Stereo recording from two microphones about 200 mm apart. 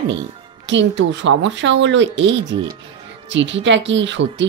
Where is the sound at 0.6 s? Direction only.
65° right (ahead or behind).